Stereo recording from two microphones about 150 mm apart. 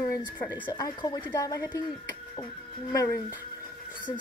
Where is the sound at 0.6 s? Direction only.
30° left (ahead or behind).